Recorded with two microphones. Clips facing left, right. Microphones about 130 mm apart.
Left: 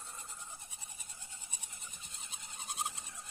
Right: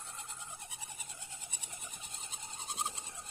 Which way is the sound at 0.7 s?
90° right.